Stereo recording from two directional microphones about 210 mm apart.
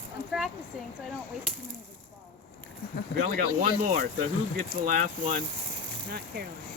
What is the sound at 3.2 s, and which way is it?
Speech, 40° right (ahead or behind).